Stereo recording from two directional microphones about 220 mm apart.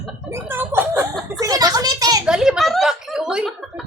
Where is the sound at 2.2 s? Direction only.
5° right (ahead or behind).